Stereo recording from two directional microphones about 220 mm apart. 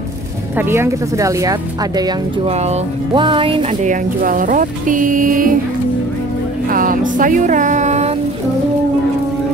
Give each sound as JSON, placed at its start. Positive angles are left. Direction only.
{"t": 0.6, "sound": "a woman's voice", "side_deg": -10}
{"t": 2.5, "sound": "speech", "side_deg": -30}
{"t": 6.7, "sound": "speech", "side_deg": -40}